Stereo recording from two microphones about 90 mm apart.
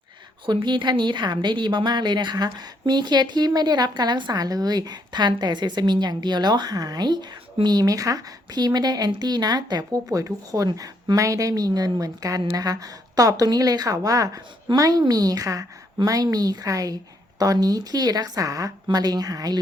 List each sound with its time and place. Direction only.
0.4 s a woman's voice: 60° right (ahead or behind); by 19.5 s 40° right (ahead or behind)